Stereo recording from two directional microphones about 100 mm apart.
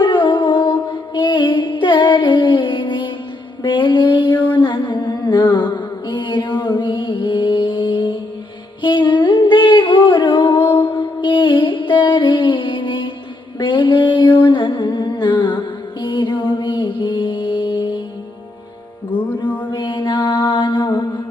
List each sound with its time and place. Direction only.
0.0 s music: 50° left (ahead or behind)
3.6 s mantra: 50° left (ahead or behind)
8.8 s music: 50° left (ahead or behind)
13.6 s humming: 55° left (ahead or behind)
19.7 s mantra: 50° left (ahead or behind)